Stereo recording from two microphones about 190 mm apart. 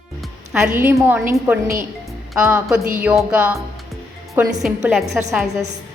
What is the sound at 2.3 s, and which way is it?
A woman's voice, 5° right (ahead or behind).